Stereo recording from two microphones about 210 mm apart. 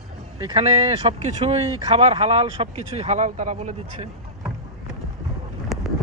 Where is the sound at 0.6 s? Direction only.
30° right (ahead or behind).